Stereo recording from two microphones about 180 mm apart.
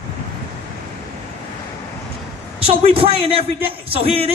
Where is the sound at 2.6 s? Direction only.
35° right (ahead or behind).